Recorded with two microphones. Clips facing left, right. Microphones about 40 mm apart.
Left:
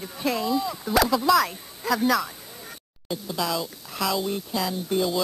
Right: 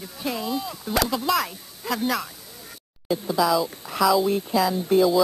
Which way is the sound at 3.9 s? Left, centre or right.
Centre.